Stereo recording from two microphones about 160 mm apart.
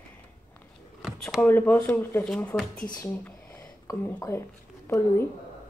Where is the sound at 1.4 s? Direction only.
10° left (ahead or behind).